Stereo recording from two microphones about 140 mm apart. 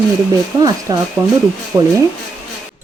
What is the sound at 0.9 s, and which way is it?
Speech, 30° right (ahead or behind).